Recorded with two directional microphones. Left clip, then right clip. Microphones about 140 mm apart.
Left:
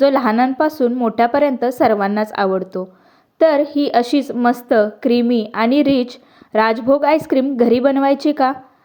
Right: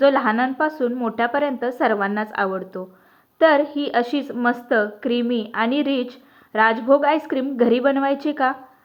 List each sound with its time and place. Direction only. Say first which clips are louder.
0.0 s a woman's voice: left 3 dB; 50° left (ahead or behind)